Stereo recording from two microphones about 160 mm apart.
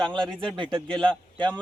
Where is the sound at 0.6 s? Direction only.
30° right (ahead or behind).